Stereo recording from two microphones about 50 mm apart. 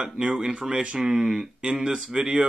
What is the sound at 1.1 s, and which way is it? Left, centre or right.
Speech, centre.